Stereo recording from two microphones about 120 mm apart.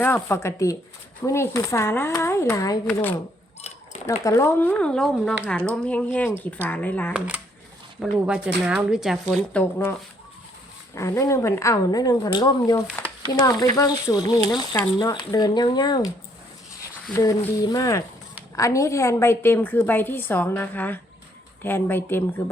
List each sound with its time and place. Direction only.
0.0 s speech: 20° left (ahead or behind)
4.2 s a woman's voice: 25° left (ahead or behind)
7.1 s speech: 10° right (ahead or behind)
9.3 s a woman's voice: 10° left (ahead or behind)
10.9 s speech: 25° left (ahead or behind)
17.7 s a woman's voice: 30° left (ahead or behind)